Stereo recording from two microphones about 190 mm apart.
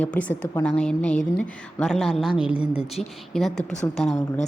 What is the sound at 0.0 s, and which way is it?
A woman's voice, 5° left (ahead or behind).